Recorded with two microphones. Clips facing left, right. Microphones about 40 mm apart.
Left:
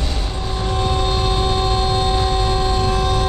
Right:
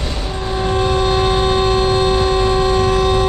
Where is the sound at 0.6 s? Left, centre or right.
Right.